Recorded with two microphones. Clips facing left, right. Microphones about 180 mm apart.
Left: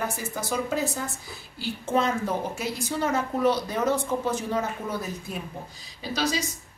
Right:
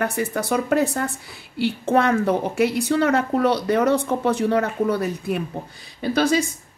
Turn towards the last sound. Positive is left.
turn(degrees=-55)  # may be behind; listen again after turning